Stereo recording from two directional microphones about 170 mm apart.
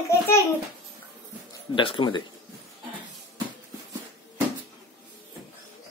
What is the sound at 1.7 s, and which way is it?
Speech, 30° left (ahead or behind).